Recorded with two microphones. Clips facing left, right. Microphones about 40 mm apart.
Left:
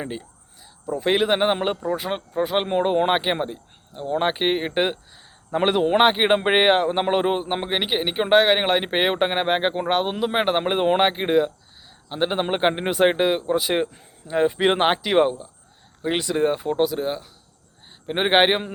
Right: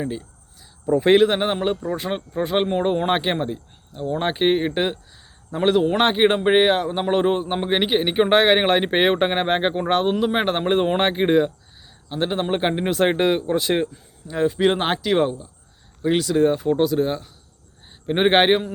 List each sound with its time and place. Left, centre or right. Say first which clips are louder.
0.0 s speech: right 3 dB; left
1.0 s speech: right 6 dB; centre
1.3 s a man's voice: left 1 dB; centre
1.9 s a man's voice: even; centre
5.5 s speech: right 1 dB; left
7.1 s a man's voice: right 1 dB; centre
7.7 s speech: right 6 dB; centre
12.0 s a man's voice: even; centre
14.3 s a man's voice: even; left
16.6 s speech: right 3 dB; centre